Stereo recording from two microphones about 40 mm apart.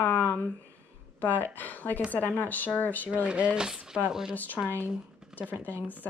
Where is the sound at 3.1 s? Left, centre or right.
Right; by 4.3 s centre.